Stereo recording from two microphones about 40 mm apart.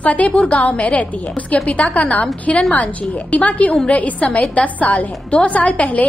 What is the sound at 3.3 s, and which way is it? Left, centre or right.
A woman's voice, left.